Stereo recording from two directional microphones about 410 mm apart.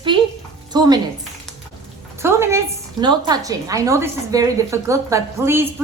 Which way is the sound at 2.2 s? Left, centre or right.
Centre.